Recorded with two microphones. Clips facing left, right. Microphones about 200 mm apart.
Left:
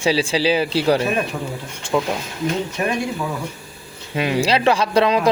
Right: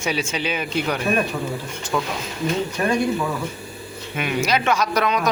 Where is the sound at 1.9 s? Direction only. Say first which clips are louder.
Left 4 dB; 20° left (ahead or behind).